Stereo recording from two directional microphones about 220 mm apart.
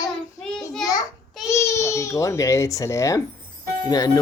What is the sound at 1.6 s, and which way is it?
Speech, 15° left (ahead or behind).